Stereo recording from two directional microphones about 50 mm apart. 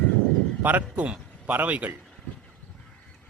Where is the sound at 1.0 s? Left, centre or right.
Right.